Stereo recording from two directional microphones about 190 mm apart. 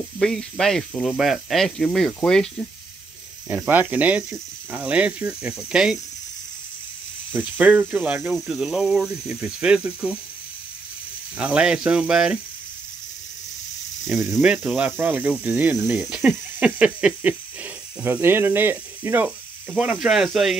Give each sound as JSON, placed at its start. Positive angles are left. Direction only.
{"t": 0.2, "sound": "speech", "side_deg": 5}
{"t": 3.4, "sound": "speech", "side_deg": -10}
{"t": 7.3, "sound": "speech", "side_deg": -10}
{"t": 11.3, "sound": "speech", "side_deg": -5}
{"t": 14.0, "sound": "speech", "side_deg": 0}